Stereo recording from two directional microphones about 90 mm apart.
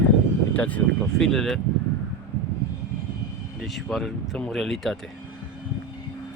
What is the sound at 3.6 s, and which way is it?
Speech, centre (ahead or behind).